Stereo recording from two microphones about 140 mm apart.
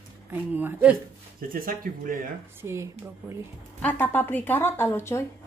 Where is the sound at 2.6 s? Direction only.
20° right (ahead or behind).